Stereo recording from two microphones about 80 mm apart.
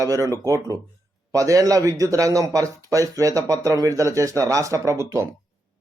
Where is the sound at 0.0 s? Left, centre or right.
Right.